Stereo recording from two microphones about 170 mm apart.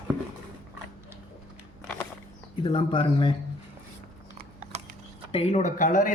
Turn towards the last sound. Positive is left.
turn(degrees=50)  # may be behind; listen again after turning